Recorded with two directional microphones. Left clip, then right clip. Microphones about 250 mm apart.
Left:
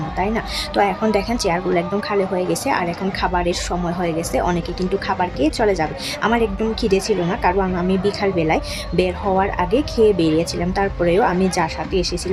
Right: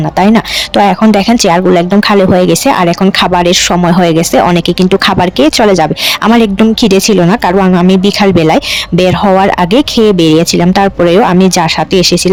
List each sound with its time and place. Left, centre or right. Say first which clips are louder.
0.2 s speech: right 13 dB; right